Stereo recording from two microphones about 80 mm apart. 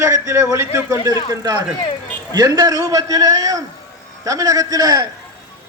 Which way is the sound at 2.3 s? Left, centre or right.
Right.